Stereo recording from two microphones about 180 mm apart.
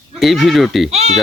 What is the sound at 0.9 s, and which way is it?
Speech, 40° right (ahead or behind).